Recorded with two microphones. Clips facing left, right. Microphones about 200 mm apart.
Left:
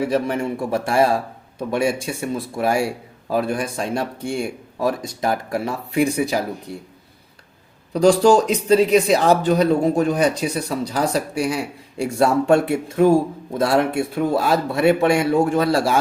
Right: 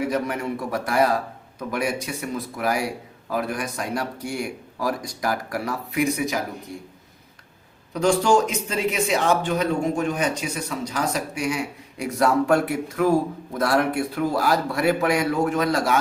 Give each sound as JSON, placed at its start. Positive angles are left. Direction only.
{"t": 0.1, "sound": "a man's voice", "side_deg": 30}
{"t": 7.9, "sound": "speech", "side_deg": 35}